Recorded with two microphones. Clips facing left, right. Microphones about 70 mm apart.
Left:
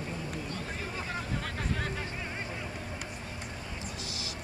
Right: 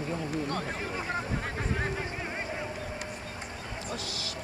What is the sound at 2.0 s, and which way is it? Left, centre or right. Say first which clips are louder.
Vehicle: right 3 dB; right.